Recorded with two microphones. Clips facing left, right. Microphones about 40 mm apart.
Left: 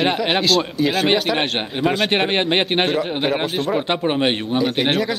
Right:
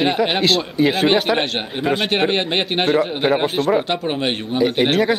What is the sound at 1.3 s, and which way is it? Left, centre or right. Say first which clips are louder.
Speech: even; centre.